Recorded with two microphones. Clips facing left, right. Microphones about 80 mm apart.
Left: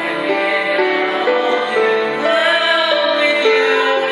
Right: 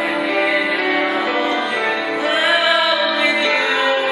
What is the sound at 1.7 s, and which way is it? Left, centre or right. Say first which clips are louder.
Music: left 6 dB; centre.